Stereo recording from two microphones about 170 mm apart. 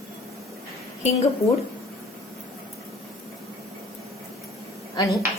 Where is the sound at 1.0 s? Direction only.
40° left (ahead or behind).